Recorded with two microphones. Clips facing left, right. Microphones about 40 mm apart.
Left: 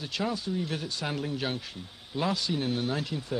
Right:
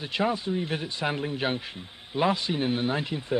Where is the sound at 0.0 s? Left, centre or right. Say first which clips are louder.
Right 5 dB; right.